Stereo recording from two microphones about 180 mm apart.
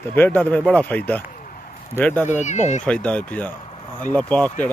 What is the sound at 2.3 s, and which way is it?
Speech, 40° left (ahead or behind).